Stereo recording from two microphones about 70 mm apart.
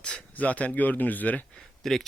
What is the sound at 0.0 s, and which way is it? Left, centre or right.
Speech, centre.